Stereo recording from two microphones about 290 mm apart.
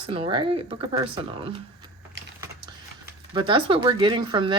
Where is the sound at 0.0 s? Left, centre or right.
Centre.